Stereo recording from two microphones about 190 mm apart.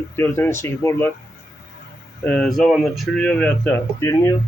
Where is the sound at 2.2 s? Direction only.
5° left (ahead or behind).